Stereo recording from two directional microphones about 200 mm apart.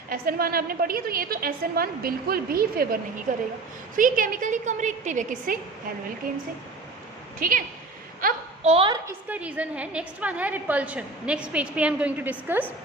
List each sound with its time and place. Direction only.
0.1 s a woman's voice: 50° right (ahead or behind)
7.3 s a woman's voice: 45° right (ahead or behind)
8.6 s a woman's voice: 30° right (ahead or behind)
9.0 s a woman's voice: 5° right (ahead or behind)